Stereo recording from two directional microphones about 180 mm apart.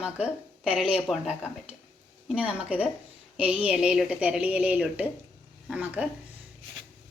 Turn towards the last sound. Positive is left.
turn(degrees=-5)  # may be behind; listen again after turning